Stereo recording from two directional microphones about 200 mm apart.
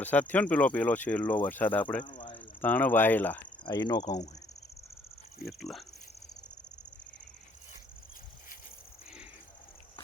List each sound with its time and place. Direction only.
0.0 s speech: 10° left (ahead or behind)
2.0 s a sound: 25° left (ahead or behind)
2.3 s speech: 10° left (ahead or behind)
3.6 s speech: 20° left (ahead or behind)
5.5 s speech: centre (ahead or behind)